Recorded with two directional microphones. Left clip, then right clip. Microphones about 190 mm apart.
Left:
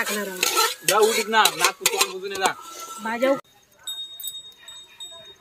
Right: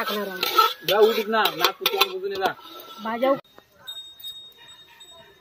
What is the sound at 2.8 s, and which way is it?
Speech, 15° left (ahead or behind).